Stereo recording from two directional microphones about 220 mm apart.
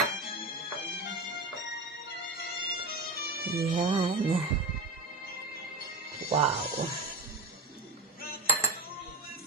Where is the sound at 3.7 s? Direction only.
25° right (ahead or behind).